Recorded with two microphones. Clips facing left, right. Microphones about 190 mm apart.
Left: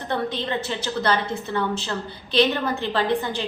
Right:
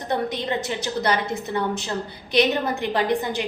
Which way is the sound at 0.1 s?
15° right (ahead or behind).